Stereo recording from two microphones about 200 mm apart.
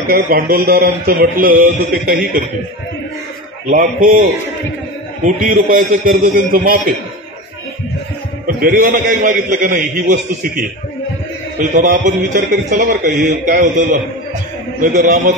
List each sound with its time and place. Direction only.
0.1 s a man's voice: 50° right (ahead or behind)
3.7 s a man's voice: 45° right (ahead or behind)
8.5 s a man's voice: 45° right (ahead or behind)